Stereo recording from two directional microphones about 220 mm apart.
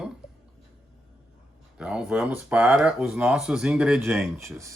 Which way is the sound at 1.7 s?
5° right (ahead or behind).